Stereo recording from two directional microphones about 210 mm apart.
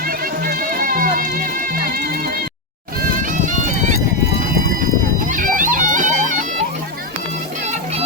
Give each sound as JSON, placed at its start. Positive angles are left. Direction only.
{"t": 0.4, "sound": "music", "side_deg": -45}
{"t": 5.3, "sound": "music", "side_deg": -40}